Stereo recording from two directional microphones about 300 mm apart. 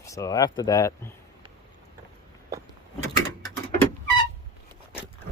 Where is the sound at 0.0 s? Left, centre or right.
Centre.